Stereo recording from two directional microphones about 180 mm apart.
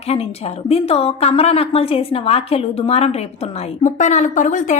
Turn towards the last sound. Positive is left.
turn(degrees=45)  # may be behind; listen again after turning